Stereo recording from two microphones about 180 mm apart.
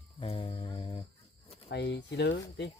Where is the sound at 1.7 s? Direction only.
75° left (ahead or behind).